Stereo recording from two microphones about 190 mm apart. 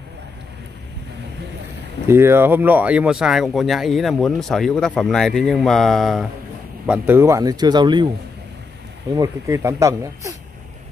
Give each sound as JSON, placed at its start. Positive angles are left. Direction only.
{"t": 2.0, "sound": "speech", "side_deg": -15}
{"t": 6.9, "sound": "speech", "side_deg": -10}
{"t": 9.1, "sound": "speech", "side_deg": -15}